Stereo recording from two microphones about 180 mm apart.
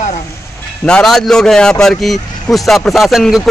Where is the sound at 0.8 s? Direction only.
5° left (ahead or behind).